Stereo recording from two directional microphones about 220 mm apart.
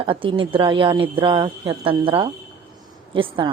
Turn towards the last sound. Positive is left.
turn(degrees=-25)  # may be behind; listen again after turning